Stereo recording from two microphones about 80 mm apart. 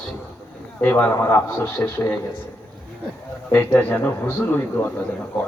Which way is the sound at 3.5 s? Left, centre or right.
Left.